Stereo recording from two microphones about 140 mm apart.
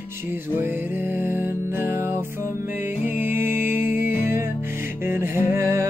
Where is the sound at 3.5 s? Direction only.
70° left (ahead or behind).